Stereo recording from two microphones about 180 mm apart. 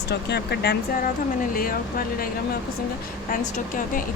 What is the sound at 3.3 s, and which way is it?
Speech, 50° left (ahead or behind).